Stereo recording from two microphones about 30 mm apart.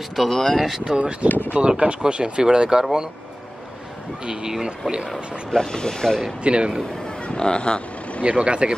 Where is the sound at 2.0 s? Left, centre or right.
Right.